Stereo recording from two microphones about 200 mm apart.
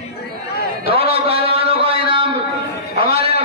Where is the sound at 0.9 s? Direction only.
30° right (ahead or behind).